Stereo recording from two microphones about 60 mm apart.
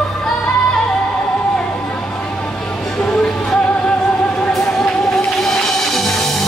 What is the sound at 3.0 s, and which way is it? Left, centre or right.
Music, centre.